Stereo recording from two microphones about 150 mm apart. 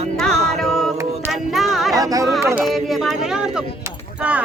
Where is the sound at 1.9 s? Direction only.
25° right (ahead or behind).